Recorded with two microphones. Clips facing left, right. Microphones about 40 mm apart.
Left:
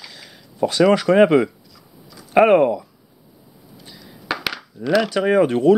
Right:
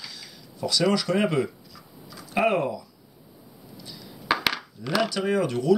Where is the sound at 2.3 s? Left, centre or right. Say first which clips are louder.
Left 10 dB; left.